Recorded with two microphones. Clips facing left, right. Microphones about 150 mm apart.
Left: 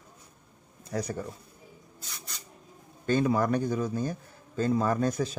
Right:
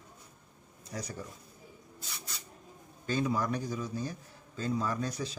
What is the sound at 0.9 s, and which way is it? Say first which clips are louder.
Speech: left 8 dB; 60° left (ahead or behind).